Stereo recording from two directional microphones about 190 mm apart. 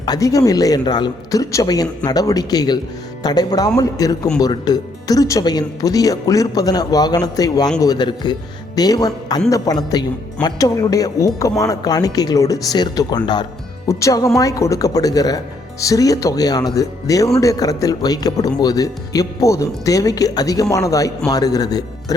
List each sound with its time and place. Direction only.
0.0 s speech: 20° left (ahead or behind)